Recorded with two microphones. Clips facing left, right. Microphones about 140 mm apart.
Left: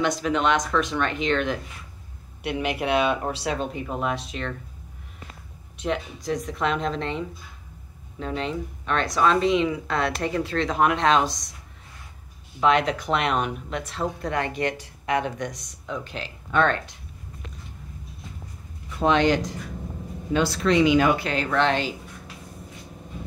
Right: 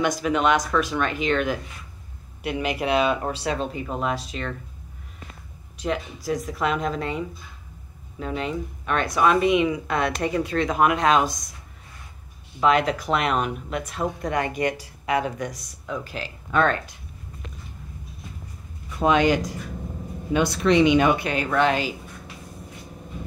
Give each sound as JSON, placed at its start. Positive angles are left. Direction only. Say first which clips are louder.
{"t": 0.0, "sound": "speech", "louder": "right 1 dB", "side_deg": -10}
{"t": 5.8, "sound": "speech", "louder": "even", "side_deg": 0}
{"t": 12.5, "sound": "speech", "louder": "right 1 dB", "side_deg": 0}
{"t": 18.9, "sound": "speech", "louder": "right 1 dB", "side_deg": -10}